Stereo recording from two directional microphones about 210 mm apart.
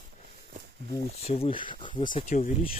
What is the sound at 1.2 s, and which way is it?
Speech, 25° left (ahead or behind).